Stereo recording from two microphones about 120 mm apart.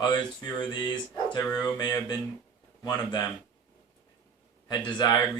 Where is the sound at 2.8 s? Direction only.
35° left (ahead or behind).